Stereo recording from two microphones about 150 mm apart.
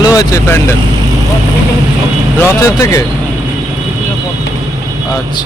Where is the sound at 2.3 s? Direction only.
20° left (ahead or behind).